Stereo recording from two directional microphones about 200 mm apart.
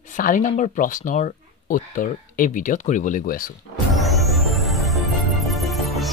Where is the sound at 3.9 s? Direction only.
Centre (ahead or behind).